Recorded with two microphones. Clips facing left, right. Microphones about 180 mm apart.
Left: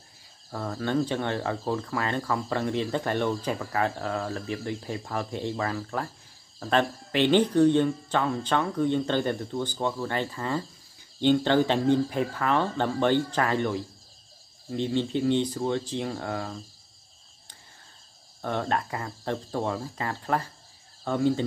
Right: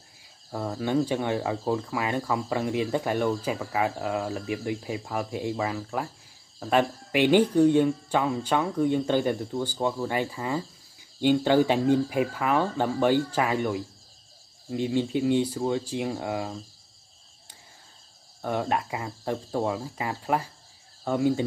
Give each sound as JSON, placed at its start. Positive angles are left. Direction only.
{"t": 0.5, "sound": "speech", "side_deg": -15}
{"t": 18.4, "sound": "speech", "side_deg": -10}